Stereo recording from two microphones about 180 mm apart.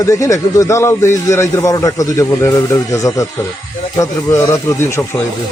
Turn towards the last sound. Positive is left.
turn(degrees=15)  # may be behind; listen again after turning